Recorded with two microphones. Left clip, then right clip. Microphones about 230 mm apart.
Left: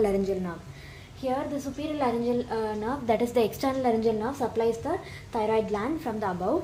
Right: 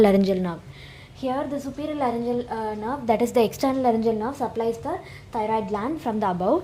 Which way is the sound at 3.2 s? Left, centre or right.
Right.